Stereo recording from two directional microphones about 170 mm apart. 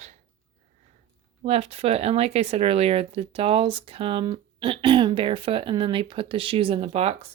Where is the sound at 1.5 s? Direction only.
35° right (ahead or behind).